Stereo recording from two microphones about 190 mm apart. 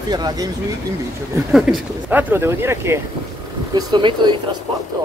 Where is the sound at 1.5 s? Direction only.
Centre (ahead or behind).